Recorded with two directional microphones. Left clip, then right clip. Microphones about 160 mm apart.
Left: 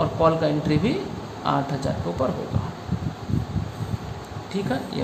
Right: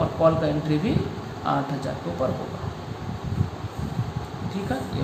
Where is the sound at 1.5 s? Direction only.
35° left (ahead or behind).